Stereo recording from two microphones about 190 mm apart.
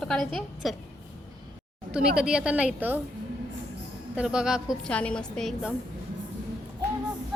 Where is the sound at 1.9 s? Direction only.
5° right (ahead or behind).